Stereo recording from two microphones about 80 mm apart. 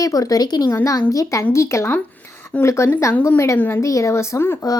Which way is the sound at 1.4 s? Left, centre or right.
Left.